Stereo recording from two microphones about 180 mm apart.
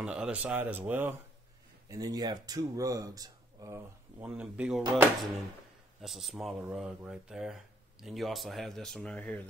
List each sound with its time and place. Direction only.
0.0 s speech: 5° right (ahead or behind)
1.9 s speech: 20° right (ahead or behind)
4.2 s speech: 5° right (ahead or behind)
5.9 s speech: centre (ahead or behind)